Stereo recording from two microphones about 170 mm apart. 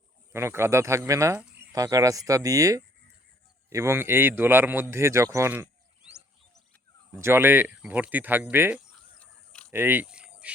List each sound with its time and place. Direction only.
0.3 s speech: 15° right (ahead or behind)
7.2 s speech: 15° right (ahead or behind)
9.1 s a sound: 5° left (ahead or behind)
9.7 s cricket: 10° right (ahead or behind)